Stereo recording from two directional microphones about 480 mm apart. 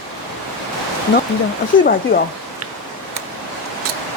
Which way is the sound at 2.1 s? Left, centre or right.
Centre.